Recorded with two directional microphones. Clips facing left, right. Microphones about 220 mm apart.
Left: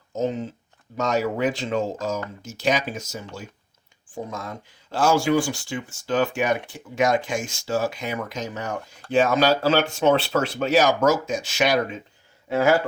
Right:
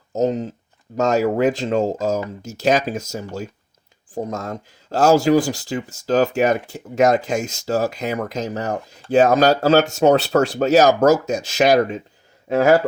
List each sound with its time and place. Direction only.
0.1 s speech: 40° right (ahead or behind)